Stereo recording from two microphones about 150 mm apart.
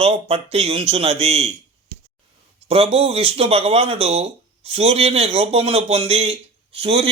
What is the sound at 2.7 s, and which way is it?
A man's voice, 40° right (ahead or behind).